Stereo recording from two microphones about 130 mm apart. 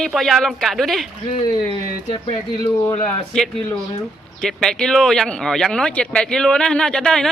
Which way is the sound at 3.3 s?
5° left (ahead or behind).